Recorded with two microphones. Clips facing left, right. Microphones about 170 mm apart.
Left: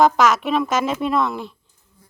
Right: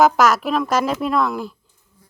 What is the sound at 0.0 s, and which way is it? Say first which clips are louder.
A woman's voice: right 1 dB; centre (ahead or behind).